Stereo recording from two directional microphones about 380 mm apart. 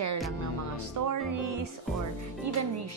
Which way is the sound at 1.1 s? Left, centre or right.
Right.